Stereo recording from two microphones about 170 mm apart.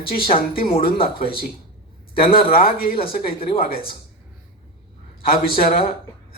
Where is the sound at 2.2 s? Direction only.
60° left (ahead or behind).